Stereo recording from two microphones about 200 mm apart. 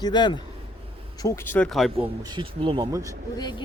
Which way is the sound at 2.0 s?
20° right (ahead or behind).